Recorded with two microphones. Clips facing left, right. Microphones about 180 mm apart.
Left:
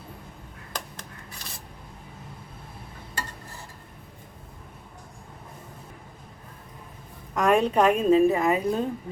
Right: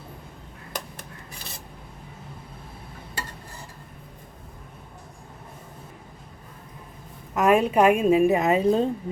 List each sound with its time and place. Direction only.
7.3 s a woman's voice: 5° right (ahead or behind); by 8.9 s 25° right (ahead or behind)